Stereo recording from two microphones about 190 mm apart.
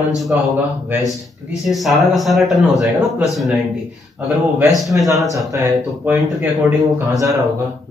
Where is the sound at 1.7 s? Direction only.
Centre (ahead or behind).